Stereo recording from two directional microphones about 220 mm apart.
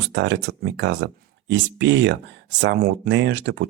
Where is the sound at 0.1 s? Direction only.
55° right (ahead or behind).